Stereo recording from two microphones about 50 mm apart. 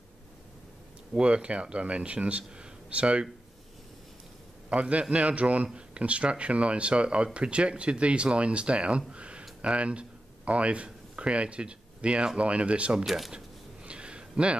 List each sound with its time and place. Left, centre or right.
1.1 s speech: right
4.6 s a man's voice: right
13.0 s speech: centre
13.8 s a sound: right